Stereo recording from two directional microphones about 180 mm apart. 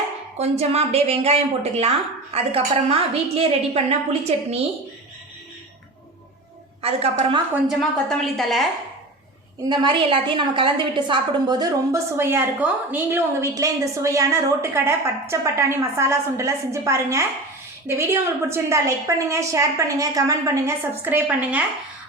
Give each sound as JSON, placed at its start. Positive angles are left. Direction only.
{"t": 0.3, "sound": "a woman's voice", "side_deg": -35}
{"t": 6.8, "sound": "a woman's voice", "side_deg": -35}
{"t": 7.5, "sound": "a woman's voice", "side_deg": 0}
{"t": 9.6, "sound": "a woman's voice", "side_deg": -25}